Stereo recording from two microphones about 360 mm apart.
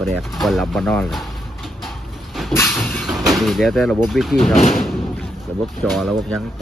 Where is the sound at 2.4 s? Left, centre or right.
Centre.